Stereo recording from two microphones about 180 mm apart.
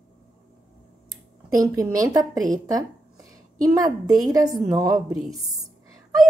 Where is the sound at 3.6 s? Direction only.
20° right (ahead or behind).